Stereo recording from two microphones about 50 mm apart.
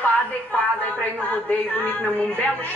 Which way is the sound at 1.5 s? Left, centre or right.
Left.